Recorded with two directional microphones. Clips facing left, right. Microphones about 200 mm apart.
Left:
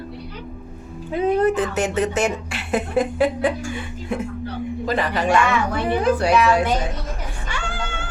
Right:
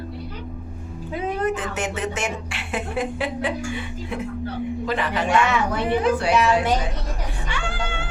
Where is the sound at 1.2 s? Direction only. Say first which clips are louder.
Left 7 dB; 35° left (ahead or behind).